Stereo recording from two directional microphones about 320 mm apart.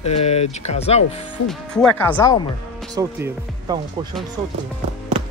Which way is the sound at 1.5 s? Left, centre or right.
Centre.